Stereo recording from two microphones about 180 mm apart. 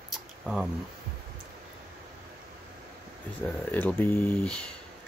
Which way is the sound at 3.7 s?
10° left (ahead or behind).